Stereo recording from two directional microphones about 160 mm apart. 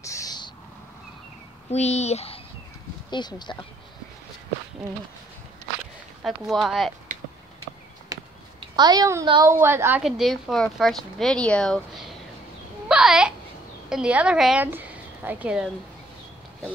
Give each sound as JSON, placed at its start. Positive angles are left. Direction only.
{"t": 0.0, "sound": "owl", "side_deg": 20}
{"t": 1.7, "sound": "speech", "side_deg": 45}
{"t": 3.1, "sound": "speech", "side_deg": 25}
{"t": 6.2, "sound": "speech", "side_deg": 0}
{"t": 8.1, "sound": "a sound", "side_deg": -20}
{"t": 8.5, "sound": "a woman's voice", "side_deg": -25}
{"t": 10.0, "sound": "a child's voice", "side_deg": 0}